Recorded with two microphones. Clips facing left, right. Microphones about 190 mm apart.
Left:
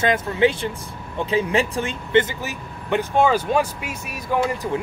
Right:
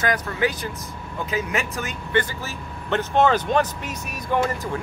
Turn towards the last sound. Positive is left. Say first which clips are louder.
# left 1 dB
turn(degrees=10)  # may be behind; listen again after turning